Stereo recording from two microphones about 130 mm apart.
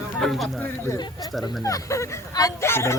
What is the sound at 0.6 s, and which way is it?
Speech, 20° left (ahead or behind).